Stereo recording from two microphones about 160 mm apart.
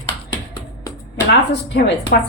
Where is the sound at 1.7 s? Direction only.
90° left.